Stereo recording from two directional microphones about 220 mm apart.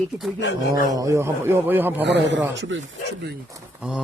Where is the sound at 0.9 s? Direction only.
15° right (ahead or behind).